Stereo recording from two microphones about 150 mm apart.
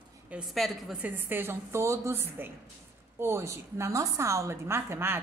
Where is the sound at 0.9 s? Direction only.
10° right (ahead or behind).